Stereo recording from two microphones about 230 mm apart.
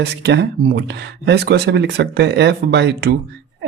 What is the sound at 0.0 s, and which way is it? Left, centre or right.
Speech, right.